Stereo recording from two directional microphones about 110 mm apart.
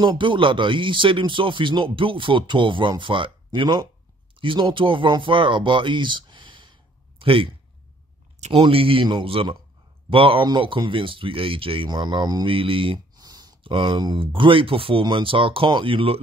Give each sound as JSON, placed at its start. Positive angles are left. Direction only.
{"t": 0.0, "sound": "speech", "side_deg": -45}
{"t": 7.2, "sound": "a sound", "side_deg": -55}
{"t": 8.5, "sound": "speech", "side_deg": -55}
{"t": 13.2, "sound": "speech", "side_deg": -35}